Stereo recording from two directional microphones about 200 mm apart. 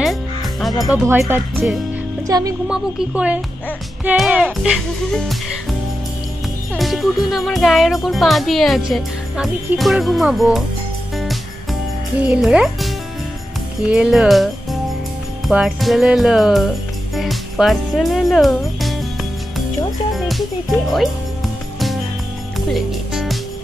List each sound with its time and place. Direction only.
0.0 s music: centre (ahead or behind)
1.0 s speech: 15° right (ahead or behind)
2.7 s speech: 5° right (ahead or behind)
12.2 s speech: 5° right (ahead or behind)
20.2 s speech: centre (ahead or behind)
22.7 s music: centre (ahead or behind)